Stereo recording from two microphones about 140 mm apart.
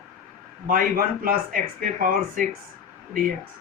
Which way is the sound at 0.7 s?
80° right.